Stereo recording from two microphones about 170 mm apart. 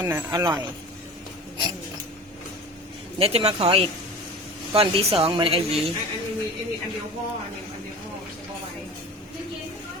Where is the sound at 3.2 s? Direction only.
35° right (ahead or behind).